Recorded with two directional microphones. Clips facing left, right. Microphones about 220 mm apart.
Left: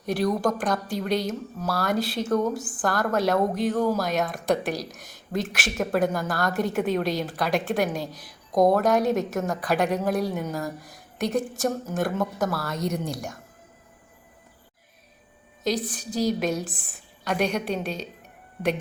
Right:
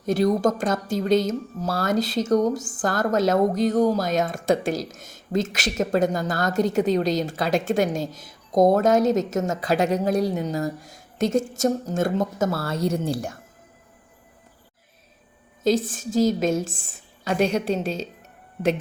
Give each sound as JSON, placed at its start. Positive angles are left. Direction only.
{"t": 0.0, "sound": "speech", "side_deg": -25}
{"t": 4.0, "sound": "speech", "side_deg": -45}
{"t": 4.4, "sound": "speech", "side_deg": -25}
{"t": 6.7, "sound": "a woman's voice", "side_deg": -40}
{"t": 7.3, "sound": "speech", "side_deg": -25}
{"t": 15.6, "sound": "speech", "side_deg": -25}